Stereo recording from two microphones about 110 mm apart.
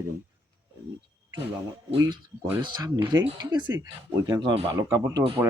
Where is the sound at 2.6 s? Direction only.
40° right (ahead or behind).